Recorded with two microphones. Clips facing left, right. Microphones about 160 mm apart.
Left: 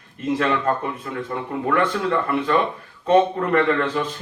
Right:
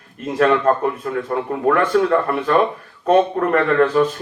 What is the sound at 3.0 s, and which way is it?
A man's voice, 50° right (ahead or behind).